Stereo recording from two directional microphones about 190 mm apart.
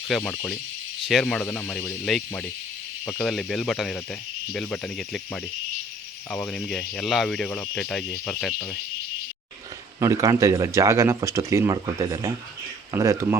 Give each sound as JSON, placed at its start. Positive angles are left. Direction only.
{"t": 0.1, "sound": "speech", "side_deg": 5}
{"t": 10.0, "sound": "speech", "side_deg": -15}